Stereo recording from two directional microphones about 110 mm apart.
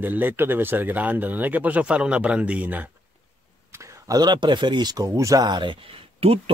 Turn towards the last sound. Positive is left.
turn(degrees=-60)  # may be behind; listen again after turning